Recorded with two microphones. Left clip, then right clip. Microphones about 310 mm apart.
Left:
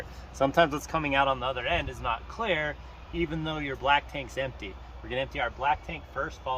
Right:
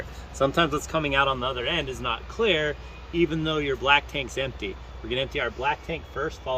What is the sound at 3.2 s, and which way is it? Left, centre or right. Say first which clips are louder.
Speech: right 7 dB; centre.